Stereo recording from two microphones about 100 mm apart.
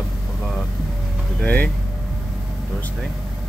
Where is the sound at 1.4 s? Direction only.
15° left (ahead or behind).